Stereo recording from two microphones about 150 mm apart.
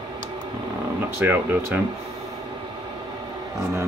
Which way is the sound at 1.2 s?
15° right (ahead or behind).